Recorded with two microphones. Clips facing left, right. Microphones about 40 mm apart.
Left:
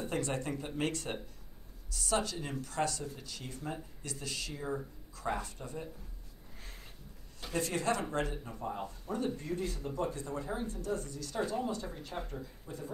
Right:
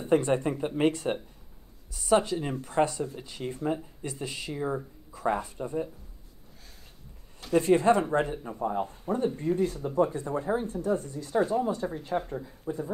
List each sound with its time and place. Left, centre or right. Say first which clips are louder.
0.0 s speech: right 11 dB; right
7.5 s speech: right 11 dB; right
9.6 s speech: right 10 dB; centre